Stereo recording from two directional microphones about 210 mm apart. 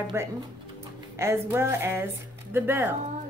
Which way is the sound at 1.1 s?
10° right (ahead or behind).